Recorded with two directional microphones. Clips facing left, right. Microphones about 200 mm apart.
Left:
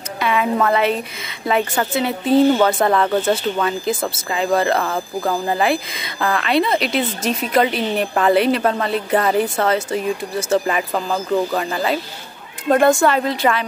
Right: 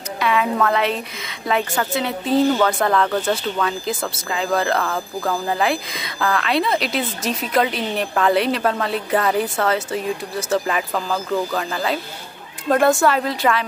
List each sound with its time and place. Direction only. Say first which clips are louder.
0.2 s a sound: left 1 dB; centre (ahead or behind)
0.6 s speech: left 2 dB; 5° left (ahead or behind)
4.1 s speech: left 3 dB; 5° left (ahead or behind)
4.8 s speech: left 2 dB; 15° left (ahead or behind); by 13.7 s centre (ahead or behind)